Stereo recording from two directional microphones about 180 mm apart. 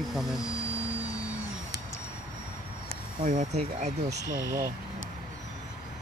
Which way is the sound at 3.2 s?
45° right (ahead or behind).